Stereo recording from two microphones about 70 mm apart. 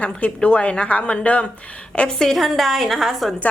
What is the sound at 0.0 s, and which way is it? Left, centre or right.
A woman's voice, centre.